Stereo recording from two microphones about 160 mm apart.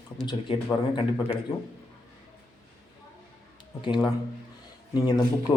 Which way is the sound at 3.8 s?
25° left (ahead or behind).